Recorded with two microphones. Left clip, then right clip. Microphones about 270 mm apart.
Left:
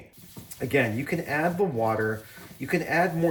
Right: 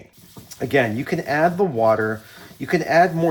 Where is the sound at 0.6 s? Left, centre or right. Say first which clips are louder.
Right 6 dB; centre.